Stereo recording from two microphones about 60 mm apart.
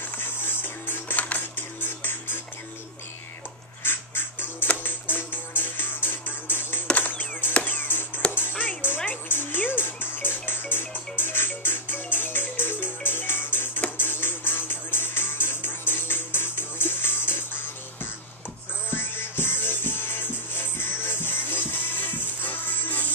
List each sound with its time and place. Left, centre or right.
0.2 s music: left
3.8 s music: left
18.9 s music: left